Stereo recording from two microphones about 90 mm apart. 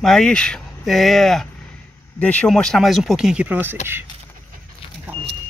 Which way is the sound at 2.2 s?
15° left (ahead or behind).